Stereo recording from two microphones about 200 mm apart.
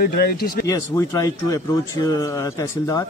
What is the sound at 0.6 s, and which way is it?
Speech, 15° left (ahead or behind).